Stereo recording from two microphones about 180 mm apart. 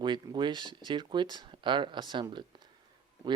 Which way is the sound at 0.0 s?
25° right (ahead or behind).